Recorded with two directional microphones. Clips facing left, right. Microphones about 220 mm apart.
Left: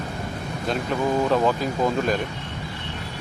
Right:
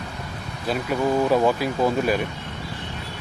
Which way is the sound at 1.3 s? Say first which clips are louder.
Right 1 dB; 10° right (ahead or behind).